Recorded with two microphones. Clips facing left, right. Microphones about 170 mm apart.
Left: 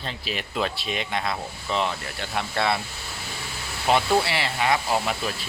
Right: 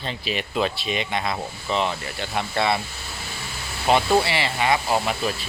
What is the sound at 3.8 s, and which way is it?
Speech, centre (ahead or behind).